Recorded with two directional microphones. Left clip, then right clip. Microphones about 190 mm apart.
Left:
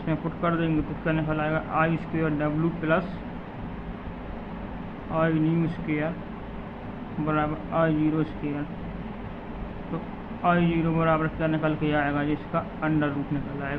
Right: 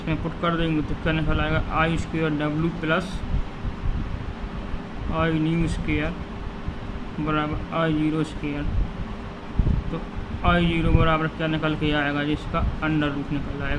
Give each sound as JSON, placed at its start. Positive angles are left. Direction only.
{"t": 0.1, "sound": "speech", "side_deg": -20}
{"t": 5.1, "sound": "speech", "side_deg": -20}
{"t": 7.3, "sound": "speech", "side_deg": -20}
{"t": 10.4, "sound": "speech", "side_deg": -25}